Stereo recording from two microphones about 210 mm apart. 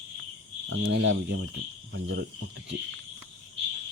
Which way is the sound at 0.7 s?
70° right (ahead or behind).